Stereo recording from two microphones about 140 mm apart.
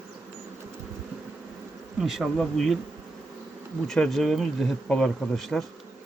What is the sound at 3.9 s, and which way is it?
Speech, centre (ahead or behind).